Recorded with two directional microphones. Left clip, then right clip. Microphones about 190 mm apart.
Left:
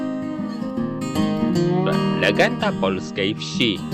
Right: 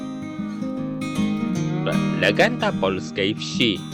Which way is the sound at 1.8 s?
Centre (ahead or behind).